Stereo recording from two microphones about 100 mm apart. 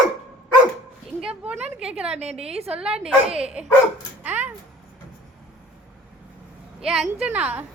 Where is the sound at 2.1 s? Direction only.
90° right.